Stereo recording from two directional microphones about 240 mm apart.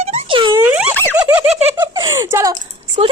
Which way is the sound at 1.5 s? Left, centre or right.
Right.